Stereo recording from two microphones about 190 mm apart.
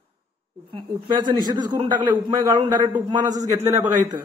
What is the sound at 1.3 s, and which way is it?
A man's voice, 20° right (ahead or behind).